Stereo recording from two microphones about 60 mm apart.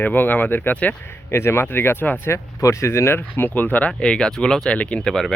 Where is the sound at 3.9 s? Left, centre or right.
Centre.